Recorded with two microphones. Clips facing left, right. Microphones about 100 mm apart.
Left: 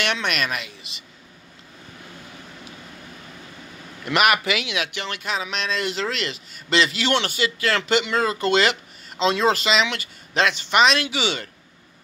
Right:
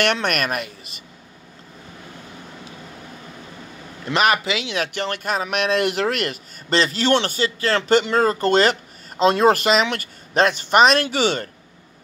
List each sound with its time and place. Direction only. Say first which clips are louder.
0.0 s speech: right 4 dB; 50° right (ahead or behind)
4.0 s a man's voice: right 1 dB; 30° right (ahead or behind)
4.7 s speech: right 4 dB; 40° right (ahead or behind)